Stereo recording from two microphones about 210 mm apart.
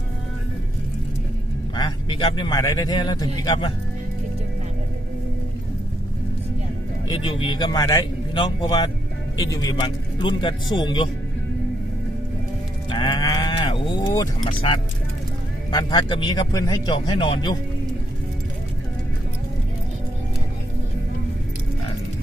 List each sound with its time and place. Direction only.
1.7 s speech: 20° left (ahead or behind)
7.1 s speech: 25° left (ahead or behind)
12.9 s a sound: 20° left (ahead or behind)
15.7 s speech: 20° left (ahead or behind)